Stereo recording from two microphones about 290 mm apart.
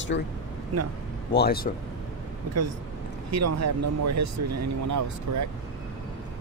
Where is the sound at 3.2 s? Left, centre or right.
Right.